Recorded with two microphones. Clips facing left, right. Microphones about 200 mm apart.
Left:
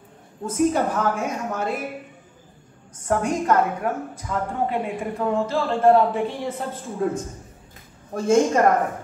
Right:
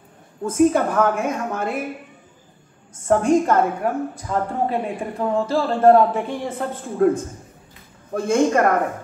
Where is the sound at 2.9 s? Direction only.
25° right (ahead or behind).